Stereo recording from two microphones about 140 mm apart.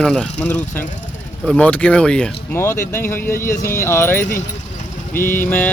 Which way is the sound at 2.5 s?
20° left (ahead or behind).